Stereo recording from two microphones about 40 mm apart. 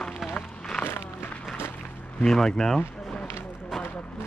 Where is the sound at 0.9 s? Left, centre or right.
Left.